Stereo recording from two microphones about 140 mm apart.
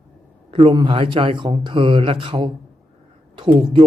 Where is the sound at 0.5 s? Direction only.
35° right (ahead or behind).